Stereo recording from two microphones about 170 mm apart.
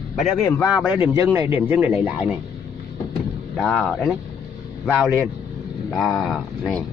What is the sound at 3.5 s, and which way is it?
Speech, 5° left (ahead or behind).